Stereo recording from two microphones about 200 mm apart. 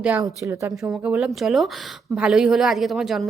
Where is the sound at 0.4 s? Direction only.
15° right (ahead or behind).